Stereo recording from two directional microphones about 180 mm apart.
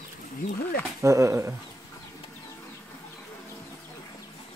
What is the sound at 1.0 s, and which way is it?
Speech, 15° right (ahead or behind).